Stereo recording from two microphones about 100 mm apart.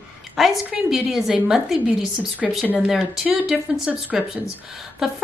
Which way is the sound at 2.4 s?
5° right (ahead or behind).